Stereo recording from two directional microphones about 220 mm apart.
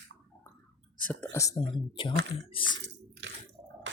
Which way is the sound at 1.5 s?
25° left (ahead or behind).